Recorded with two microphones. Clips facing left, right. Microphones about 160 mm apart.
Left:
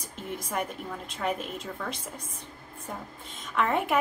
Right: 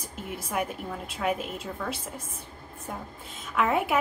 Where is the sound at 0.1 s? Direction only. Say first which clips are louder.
Right 1 dB; 5° right (ahead or behind).